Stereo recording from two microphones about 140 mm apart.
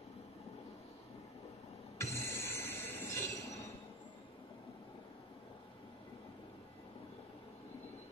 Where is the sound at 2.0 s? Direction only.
20° left (ahead or behind).